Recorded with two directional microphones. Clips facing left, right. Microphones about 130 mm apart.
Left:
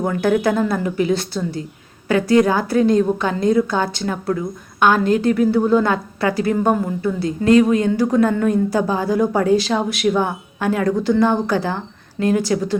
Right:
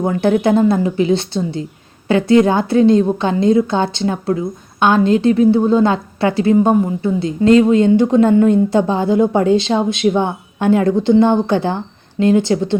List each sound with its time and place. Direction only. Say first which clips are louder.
0.0 s a woman's voice: right 3 dB; 25° right (ahead or behind)